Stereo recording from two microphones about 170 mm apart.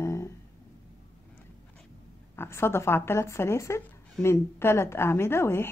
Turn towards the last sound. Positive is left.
turn(degrees=15)  # may be behind; listen again after turning